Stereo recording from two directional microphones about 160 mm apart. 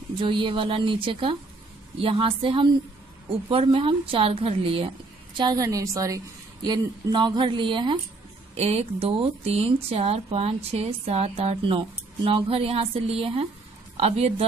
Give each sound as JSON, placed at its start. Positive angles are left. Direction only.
{"t": 0.2, "sound": "speech", "side_deg": -30}
{"t": 5.4, "sound": "a woman's voice", "side_deg": -25}